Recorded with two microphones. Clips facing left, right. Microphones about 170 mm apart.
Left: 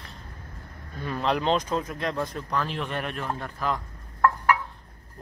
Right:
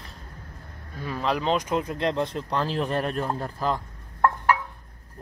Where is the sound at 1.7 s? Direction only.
15° right (ahead or behind).